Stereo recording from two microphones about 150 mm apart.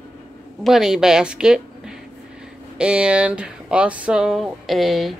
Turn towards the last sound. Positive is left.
turn(degrees=0)  # may be behind; listen again after turning